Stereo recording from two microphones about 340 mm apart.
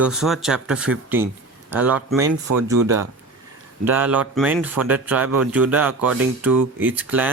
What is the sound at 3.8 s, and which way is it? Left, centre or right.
Speech, centre.